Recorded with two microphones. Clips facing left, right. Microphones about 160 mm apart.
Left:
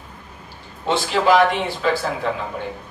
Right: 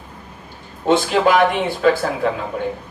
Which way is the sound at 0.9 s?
50° right (ahead or behind).